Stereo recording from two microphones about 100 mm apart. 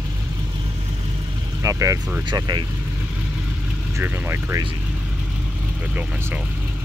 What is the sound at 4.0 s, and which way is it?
Speech, 25° right (ahead or behind).